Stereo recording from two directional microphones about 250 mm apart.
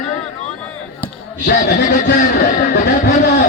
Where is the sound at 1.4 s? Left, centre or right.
Left.